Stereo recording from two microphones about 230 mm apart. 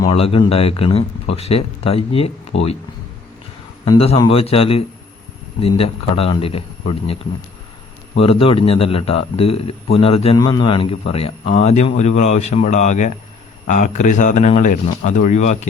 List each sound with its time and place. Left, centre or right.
0.0 s a man's voice: left
3.8 s a man's voice: left